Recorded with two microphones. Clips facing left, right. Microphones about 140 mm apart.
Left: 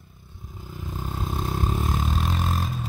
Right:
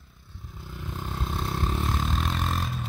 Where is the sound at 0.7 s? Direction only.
45° left (ahead or behind).